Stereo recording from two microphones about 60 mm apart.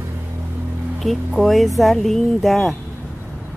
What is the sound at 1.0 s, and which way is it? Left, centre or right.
Speech, centre.